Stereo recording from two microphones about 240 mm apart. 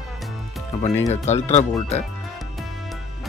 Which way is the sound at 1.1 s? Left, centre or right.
Left.